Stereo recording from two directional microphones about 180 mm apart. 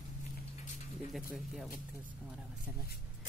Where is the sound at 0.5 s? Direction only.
45° left (ahead or behind).